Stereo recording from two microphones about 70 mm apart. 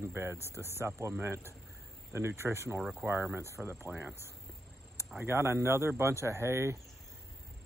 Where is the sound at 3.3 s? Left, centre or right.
Right.